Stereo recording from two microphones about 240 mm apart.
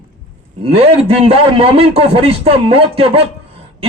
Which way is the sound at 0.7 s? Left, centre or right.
Right.